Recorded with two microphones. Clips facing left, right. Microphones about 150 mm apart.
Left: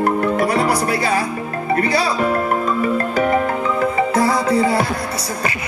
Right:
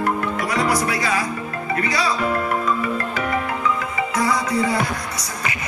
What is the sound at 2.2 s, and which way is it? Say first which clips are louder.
Music: left 3 dB; 40° left (ahead or behind).